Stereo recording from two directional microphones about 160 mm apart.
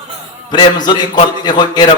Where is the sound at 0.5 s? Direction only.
25° left (ahead or behind).